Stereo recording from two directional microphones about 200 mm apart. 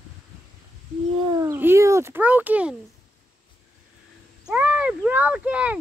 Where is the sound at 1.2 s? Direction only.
20° right (ahead or behind).